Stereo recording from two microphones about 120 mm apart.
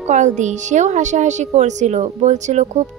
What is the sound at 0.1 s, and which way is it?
A woman's voice, 90° right.